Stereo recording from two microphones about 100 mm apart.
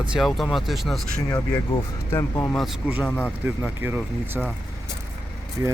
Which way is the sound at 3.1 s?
15° left (ahead or behind).